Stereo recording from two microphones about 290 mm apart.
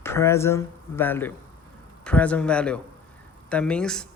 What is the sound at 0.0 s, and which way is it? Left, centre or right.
Speech, centre.